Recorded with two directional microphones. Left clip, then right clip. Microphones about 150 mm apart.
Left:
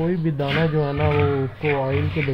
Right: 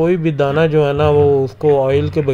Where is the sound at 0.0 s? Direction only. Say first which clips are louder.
Right 9 dB; 35° right (ahead or behind).